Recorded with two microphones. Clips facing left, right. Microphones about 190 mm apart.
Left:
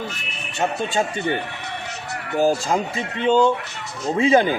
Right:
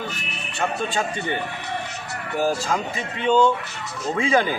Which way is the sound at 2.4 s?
30° left (ahead or behind).